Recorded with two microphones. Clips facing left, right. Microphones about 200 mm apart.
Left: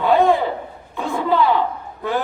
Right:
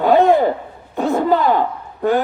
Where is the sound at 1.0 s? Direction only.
45° right (ahead or behind).